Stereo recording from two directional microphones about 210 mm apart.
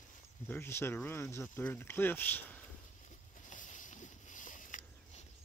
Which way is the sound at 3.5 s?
40° left (ahead or behind).